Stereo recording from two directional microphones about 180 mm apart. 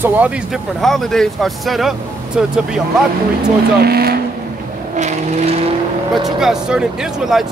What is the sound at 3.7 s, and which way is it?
Speech, 60° right (ahead or behind).